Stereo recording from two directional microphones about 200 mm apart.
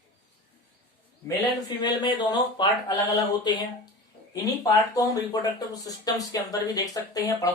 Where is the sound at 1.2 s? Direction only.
20° left (ahead or behind).